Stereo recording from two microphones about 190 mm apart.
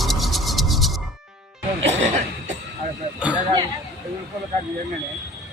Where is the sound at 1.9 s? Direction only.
40° right (ahead or behind).